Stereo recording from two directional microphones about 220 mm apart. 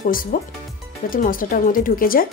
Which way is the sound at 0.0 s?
40° left (ahead or behind).